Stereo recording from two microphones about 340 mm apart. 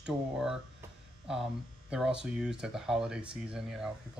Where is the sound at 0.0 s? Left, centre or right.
Centre.